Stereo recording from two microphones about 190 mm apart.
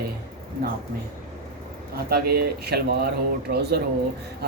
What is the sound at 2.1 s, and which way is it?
Speech, 55° right (ahead or behind).